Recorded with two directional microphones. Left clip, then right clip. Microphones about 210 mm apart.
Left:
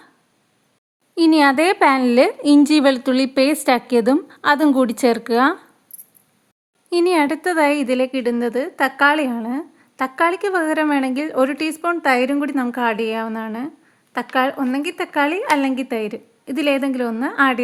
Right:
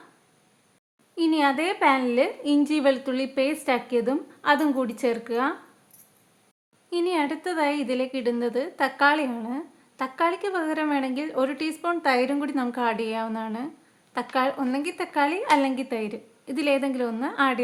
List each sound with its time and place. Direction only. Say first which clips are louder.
1.1 s a woman's voice: left 9 dB; 45° left (ahead or behind)
6.9 s a woman's voice: left 9 dB; 45° left (ahead or behind)